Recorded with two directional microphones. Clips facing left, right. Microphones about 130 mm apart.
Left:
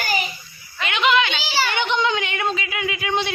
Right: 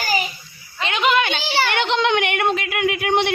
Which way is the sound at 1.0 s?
50° right (ahead or behind).